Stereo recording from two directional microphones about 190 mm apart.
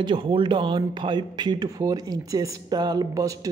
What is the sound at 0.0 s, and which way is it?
Speech, 25° right (ahead or behind).